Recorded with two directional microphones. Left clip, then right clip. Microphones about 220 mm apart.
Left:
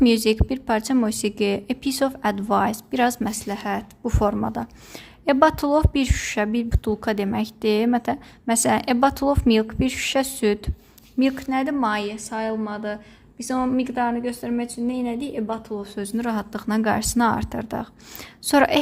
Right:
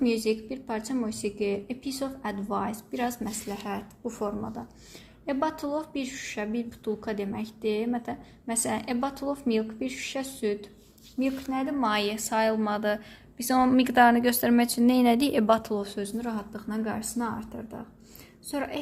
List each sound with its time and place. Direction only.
0.0 s a woman's voice: 35° left (ahead or behind)
11.8 s a woman's voice: 10° left (ahead or behind); by 15.8 s 15° right (ahead or behind)
16.1 s a woman's voice: 35° left (ahead or behind)